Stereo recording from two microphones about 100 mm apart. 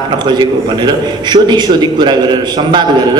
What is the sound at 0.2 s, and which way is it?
A man's voice, 50° right (ahead or behind).